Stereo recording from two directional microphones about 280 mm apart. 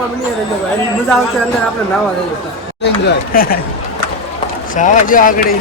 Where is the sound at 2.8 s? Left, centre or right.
Left.